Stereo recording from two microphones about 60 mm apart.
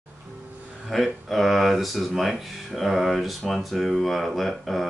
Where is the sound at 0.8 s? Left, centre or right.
Centre.